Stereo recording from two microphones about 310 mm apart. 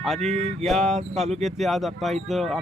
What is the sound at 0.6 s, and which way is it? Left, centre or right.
Speech, centre.